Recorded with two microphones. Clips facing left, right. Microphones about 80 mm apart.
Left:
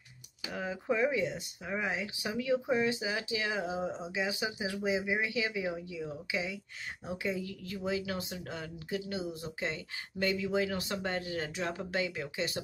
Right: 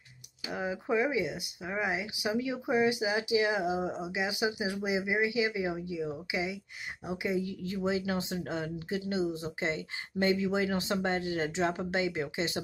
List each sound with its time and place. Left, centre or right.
0.5 s speech: centre